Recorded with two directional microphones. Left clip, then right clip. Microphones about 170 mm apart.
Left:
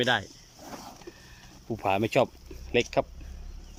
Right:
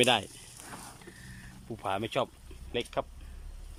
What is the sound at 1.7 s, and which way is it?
Speech, 15° left (ahead or behind).